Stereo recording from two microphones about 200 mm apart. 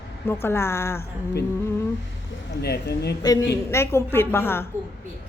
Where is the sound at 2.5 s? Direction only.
55° left (ahead or behind).